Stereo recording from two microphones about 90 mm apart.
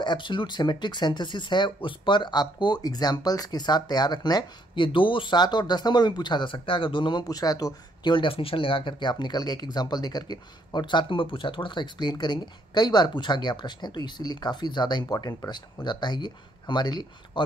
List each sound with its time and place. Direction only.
0.0 s speech: 60° left (ahead or behind)
4.8 s speech: 65° left (ahead or behind)